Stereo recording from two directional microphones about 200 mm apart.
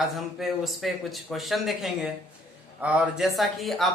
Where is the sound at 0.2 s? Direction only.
Centre (ahead or behind).